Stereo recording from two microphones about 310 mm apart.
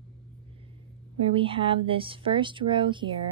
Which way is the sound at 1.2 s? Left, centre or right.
Centre.